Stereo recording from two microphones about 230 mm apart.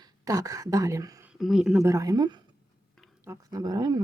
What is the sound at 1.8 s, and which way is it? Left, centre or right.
Speech, centre.